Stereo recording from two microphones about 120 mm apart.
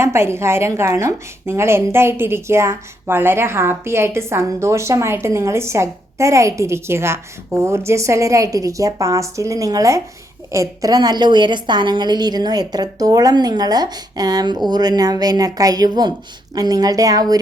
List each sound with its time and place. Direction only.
0.0 s a woman's voice: 20° right (ahead or behind)